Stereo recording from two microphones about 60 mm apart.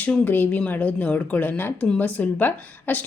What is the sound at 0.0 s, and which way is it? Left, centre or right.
A woman's voice, left.